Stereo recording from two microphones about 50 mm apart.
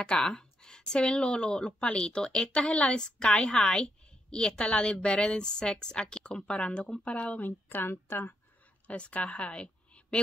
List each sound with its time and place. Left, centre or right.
0.0 s speech: centre; by 8.4 s left
8.8 s speech: left